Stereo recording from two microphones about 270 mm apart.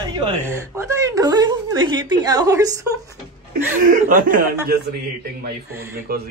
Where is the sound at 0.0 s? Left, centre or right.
Centre.